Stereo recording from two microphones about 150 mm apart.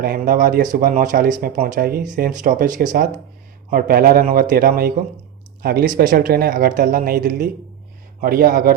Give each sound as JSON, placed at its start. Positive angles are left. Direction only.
{"t": 0.0, "sound": "speech", "side_deg": -75}
{"t": 3.7, "sound": "speech", "side_deg": -75}
{"t": 5.6, "sound": "speech", "side_deg": -90}
{"t": 6.0, "sound": "speech", "side_deg": -75}